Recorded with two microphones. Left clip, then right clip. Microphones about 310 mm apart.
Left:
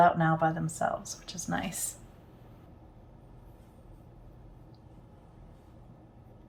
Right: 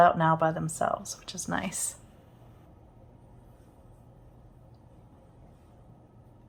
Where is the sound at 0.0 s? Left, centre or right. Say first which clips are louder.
Right 2 dB; centre.